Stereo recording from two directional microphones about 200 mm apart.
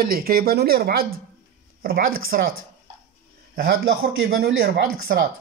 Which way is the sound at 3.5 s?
50° right (ahead or behind).